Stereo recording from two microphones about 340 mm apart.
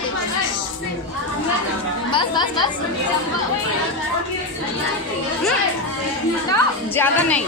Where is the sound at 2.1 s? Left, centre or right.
Centre.